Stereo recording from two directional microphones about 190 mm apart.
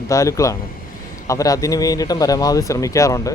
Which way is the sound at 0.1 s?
15° left (ahead or behind).